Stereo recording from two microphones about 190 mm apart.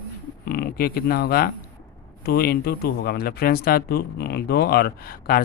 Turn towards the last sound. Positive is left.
turn(degrees=50)  # may be behind; listen again after turning